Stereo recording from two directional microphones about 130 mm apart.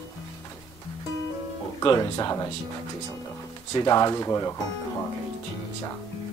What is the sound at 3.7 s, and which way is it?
Speech, 30° left (ahead or behind).